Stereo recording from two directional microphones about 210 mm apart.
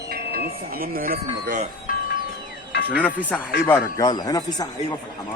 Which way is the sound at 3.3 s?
Centre (ahead or behind).